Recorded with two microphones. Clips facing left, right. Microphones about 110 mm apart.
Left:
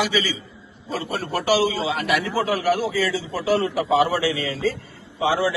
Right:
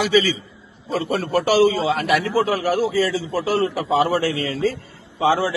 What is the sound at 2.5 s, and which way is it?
A man's voice, 30° right (ahead or behind).